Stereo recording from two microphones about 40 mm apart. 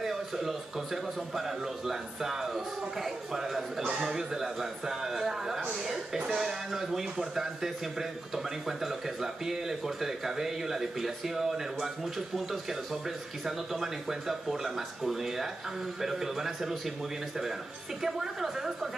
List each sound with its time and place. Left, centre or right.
0.0 s a man's voice: centre
18.0 s a man's voice: centre